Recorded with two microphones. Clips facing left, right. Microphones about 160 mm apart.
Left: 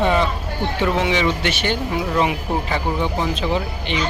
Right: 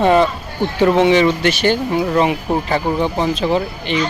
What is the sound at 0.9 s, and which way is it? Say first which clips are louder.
Speech: right 7 dB; 35° right (ahead or behind).